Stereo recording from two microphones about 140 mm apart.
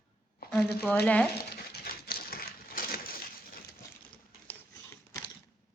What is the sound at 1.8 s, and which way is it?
Crushing, 90° left.